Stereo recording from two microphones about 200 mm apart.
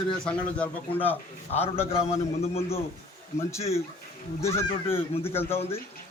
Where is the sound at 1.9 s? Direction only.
30° left (ahead or behind).